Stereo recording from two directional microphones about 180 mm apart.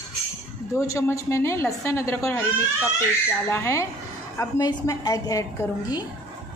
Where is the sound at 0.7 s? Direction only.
15° left (ahead or behind).